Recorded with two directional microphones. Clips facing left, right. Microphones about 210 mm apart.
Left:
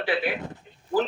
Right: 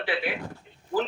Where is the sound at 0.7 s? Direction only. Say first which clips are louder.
Left 2 dB; 40° left (ahead or behind).